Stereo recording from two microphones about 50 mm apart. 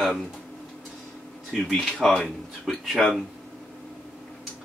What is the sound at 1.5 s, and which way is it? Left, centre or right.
Speech, centre.